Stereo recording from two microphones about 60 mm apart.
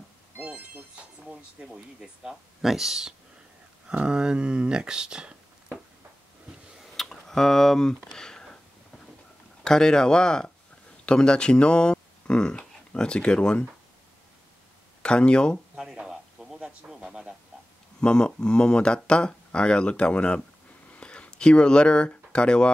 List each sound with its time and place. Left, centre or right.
0.4 s speech: right
6.8 s a sound: centre
9.6 s speech: centre
15.0 s speech: centre
15.7 s a sound: centre
18.0 s speech: centre